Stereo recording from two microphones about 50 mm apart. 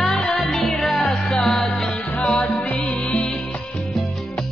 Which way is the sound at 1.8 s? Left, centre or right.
Left.